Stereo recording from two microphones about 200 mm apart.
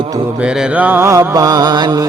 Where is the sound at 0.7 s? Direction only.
10° right (ahead or behind).